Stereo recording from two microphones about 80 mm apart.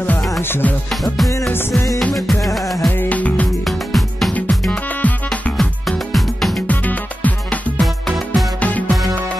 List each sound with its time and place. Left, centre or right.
0.4 s music: left
1.0 s music: centre
3.0 s music: centre
3.6 s music: centre
4.3 s music: centre
5.6 s music: centre
6.7 s music: centre